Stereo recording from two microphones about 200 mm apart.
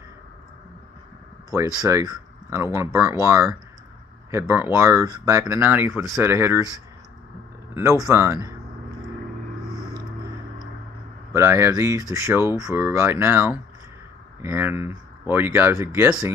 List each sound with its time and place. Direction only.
1.9 s speech: 15° right (ahead or behind)
7.7 s speech: 15° right (ahead or behind)
11.3 s speech: 10° right (ahead or behind)